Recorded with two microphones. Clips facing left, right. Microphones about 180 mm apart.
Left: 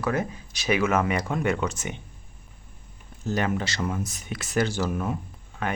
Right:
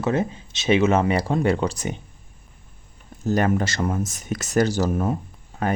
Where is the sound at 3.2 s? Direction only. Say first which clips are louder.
Right 6 dB; 45° right (ahead or behind).